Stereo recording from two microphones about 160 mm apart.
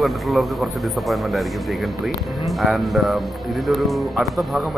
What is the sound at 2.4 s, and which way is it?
Speech, centre (ahead or behind).